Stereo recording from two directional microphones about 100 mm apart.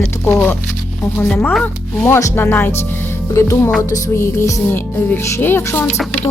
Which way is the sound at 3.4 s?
30° left (ahead or behind).